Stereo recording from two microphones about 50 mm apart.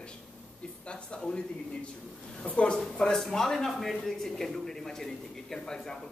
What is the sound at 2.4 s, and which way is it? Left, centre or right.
Speech, left.